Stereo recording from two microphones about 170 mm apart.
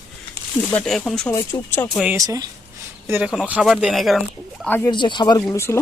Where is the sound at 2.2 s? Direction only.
20° right (ahead or behind); by 4.6 s centre (ahead or behind).